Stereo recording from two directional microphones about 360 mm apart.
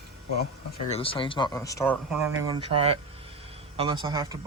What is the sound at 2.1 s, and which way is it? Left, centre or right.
Speech, centre.